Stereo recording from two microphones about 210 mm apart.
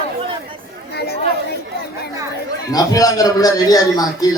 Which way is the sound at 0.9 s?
50° left (ahead or behind).